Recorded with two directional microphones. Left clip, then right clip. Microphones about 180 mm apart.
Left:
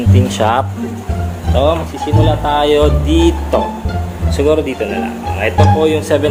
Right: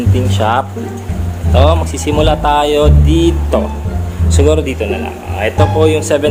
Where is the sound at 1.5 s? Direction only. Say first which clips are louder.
Right 1 dB; 20° right (ahead or behind).